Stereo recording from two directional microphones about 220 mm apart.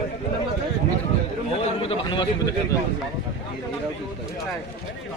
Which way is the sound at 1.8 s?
20° left (ahead or behind).